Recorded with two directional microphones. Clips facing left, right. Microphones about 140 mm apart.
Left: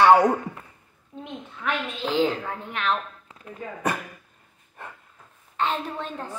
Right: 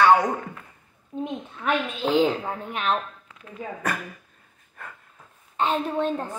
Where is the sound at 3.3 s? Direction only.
30° left (ahead or behind).